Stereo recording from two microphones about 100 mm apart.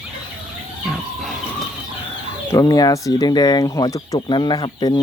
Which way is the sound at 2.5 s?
40° left (ahead or behind).